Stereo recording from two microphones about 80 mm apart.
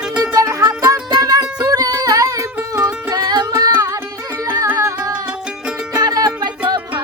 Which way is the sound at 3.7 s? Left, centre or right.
Right.